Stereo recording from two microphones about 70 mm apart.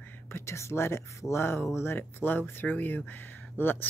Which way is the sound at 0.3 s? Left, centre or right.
Left.